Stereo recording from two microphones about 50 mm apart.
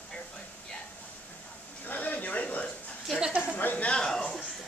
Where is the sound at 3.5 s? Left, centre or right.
Left.